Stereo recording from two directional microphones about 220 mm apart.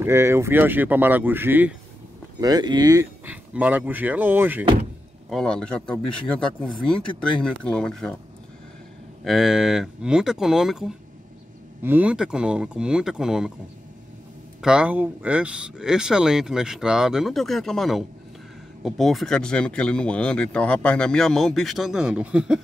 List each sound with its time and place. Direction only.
0.0 s speech: 10° right (ahead or behind)
2.4 s speech: 20° right (ahead or behind)
5.3 s speech: 5° left (ahead or behind)
9.2 s speech: centre (ahead or behind)
14.6 s speech: 5° right (ahead or behind)